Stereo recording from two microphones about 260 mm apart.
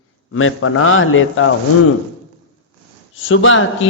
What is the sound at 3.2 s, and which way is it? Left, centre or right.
Speech, left.